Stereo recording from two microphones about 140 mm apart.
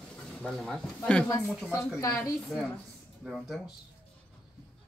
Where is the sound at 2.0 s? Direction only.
25° left (ahead or behind).